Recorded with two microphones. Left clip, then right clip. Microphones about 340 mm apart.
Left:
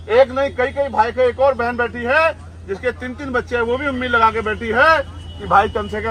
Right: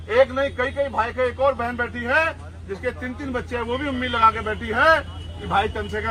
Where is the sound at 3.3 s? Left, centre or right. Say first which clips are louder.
Left 8 dB; left.